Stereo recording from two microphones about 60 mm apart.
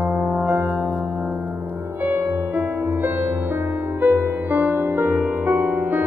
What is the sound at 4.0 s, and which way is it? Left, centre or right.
Music, right.